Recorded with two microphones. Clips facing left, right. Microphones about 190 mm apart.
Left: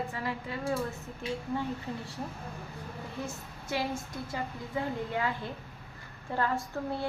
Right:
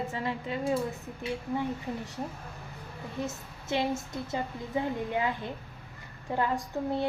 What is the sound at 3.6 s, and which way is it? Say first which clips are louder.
A woman's voice: right 4 dB; 25° right (ahead or behind).